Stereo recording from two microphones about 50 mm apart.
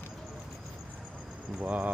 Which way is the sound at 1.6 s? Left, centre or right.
Right.